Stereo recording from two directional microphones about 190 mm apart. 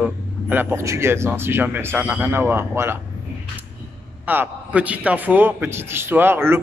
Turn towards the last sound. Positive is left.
turn(degrees=-10)  # may be behind; listen again after turning